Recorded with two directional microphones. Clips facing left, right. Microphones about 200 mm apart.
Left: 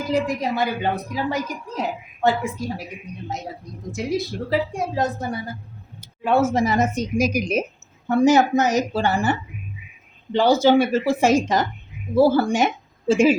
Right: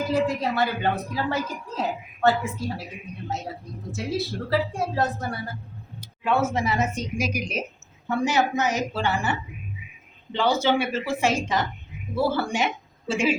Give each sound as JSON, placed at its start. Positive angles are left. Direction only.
{"t": 0.3, "sound": "a woman's voice", "side_deg": 15}
{"t": 3.9, "sound": "a woman's voice", "side_deg": 15}
{"t": 6.5, "sound": "a woman's voice", "side_deg": 40}
{"t": 10.3, "sound": "a woman's voice", "side_deg": 40}